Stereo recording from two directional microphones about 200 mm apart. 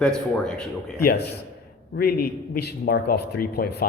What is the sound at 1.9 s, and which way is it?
A man's voice, 50° left (ahead or behind).